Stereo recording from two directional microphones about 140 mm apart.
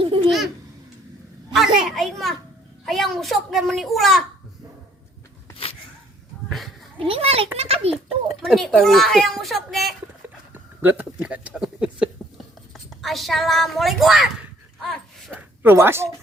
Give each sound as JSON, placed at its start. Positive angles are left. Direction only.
{"t": 0.0, "sound": "babbling", "side_deg": -40}
{"t": 0.3, "sound": "babbling", "side_deg": 0}
{"t": 1.5, "sound": "a sound", "side_deg": 0}
{"t": 2.8, "sound": "a child's voice", "side_deg": 0}
{"t": 7.1, "sound": "a child's voice", "side_deg": -45}
{"t": 8.4, "sound": "a child's voice", "side_deg": 0}
{"t": 10.2, "sound": "a sound", "side_deg": -15}
{"t": 12.7, "sound": "speech", "side_deg": 0}
{"t": 14.8, "sound": "a sound", "side_deg": 0}
{"t": 15.4, "sound": "speech", "side_deg": -15}